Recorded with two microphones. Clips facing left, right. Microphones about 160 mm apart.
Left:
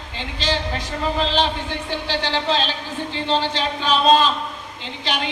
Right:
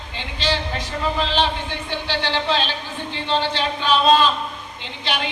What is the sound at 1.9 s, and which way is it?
Speech, 40° left (ahead or behind).